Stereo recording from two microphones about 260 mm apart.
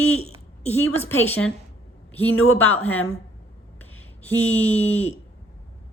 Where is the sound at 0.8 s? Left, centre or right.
Centre.